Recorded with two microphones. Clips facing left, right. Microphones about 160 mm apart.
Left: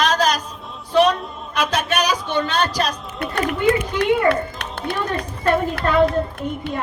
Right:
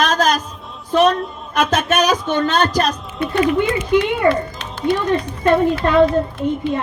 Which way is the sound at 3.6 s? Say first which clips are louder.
Right 2 dB; 70° left (ahead or behind).